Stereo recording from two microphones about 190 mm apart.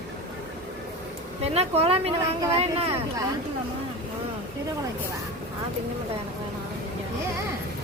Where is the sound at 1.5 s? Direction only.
30° right (ahead or behind).